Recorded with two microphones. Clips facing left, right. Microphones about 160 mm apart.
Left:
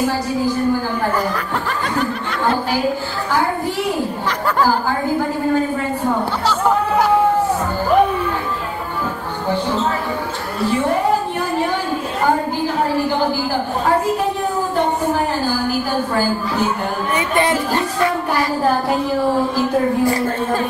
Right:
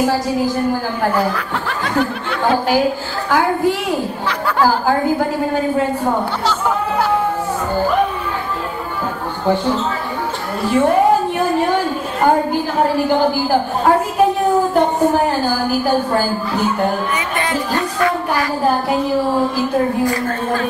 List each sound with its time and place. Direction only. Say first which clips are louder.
17.4 s speech: left 3 dB; 25° left (ahead or behind)
20.1 s a woman's voice: left 1 dB; 30° left (ahead or behind)